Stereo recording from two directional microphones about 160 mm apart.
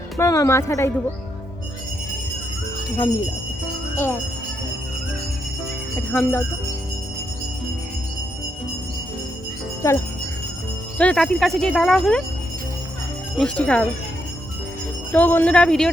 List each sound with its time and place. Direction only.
0.2 s speech: 20° left (ahead or behind)
6.1 s speech: 10° left (ahead or behind)
9.8 s jingle bell: 20° left (ahead or behind)
10.9 s speech: 5° left (ahead or behind)
13.3 s speech: 5° left (ahead or behind)
15.1 s speech: 10° left (ahead or behind)